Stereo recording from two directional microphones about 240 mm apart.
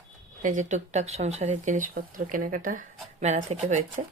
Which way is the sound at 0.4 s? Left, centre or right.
Right.